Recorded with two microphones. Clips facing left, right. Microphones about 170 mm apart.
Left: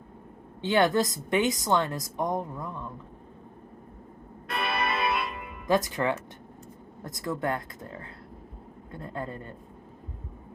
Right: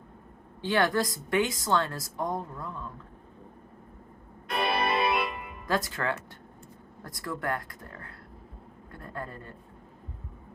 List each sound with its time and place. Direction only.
0.6 s a woman's voice: 20° left (ahead or behind)
4.5 s music: 30° right (ahead or behind)
5.6 s a woman's voice: 20° left (ahead or behind)